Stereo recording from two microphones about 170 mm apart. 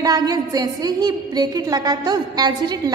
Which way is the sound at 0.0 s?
25° right (ahead or behind).